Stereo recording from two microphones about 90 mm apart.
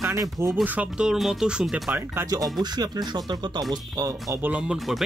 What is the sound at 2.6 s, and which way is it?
Speech, 50° right (ahead or behind).